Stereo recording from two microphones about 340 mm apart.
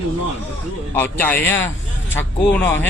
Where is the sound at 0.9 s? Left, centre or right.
Centre.